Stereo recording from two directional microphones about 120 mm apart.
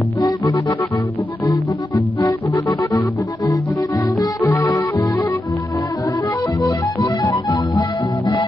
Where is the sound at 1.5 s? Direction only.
35° left (ahead or behind).